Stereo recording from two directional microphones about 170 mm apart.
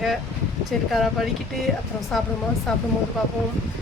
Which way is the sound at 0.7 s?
Centre (ahead or behind).